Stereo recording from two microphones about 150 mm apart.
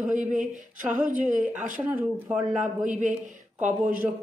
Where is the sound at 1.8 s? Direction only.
10° right (ahead or behind).